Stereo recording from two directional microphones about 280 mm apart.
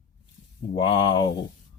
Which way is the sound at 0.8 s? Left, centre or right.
Centre.